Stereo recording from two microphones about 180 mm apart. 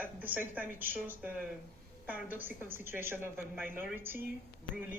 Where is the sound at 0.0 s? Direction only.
10° right (ahead or behind).